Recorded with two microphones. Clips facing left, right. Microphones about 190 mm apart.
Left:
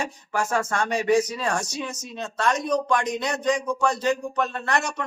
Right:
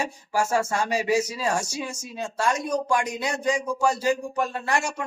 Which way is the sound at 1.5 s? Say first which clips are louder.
Right 1 dB; 25° right (ahead or behind).